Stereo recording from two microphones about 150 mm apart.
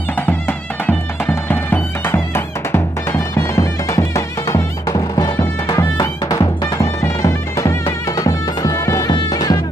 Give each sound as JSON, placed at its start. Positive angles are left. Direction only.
{"t": 0.3, "sound": "bagpipes", "side_deg": 15}
{"t": 5.4, "sound": "music", "side_deg": 20}